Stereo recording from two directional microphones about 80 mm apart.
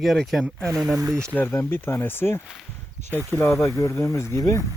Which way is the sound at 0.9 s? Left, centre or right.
Right.